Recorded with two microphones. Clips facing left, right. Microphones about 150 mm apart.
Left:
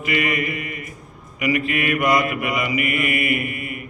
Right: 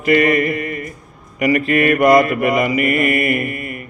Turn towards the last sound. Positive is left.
turn(degrees=-40)  # may be behind; listen again after turning